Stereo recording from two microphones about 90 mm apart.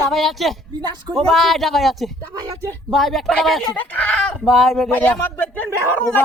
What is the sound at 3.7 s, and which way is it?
Speech, 15° left (ahead or behind).